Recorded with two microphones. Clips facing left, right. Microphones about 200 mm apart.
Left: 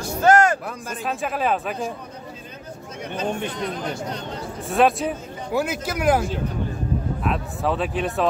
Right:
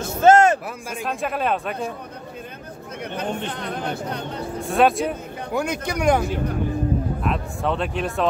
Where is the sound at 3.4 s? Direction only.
60° right (ahead or behind).